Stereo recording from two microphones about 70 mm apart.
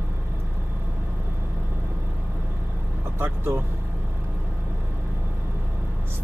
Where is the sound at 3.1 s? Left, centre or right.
Right.